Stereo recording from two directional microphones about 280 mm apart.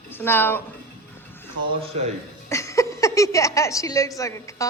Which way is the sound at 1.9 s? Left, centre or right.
Right.